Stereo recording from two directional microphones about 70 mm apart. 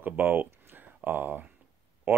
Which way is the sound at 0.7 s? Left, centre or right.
Right.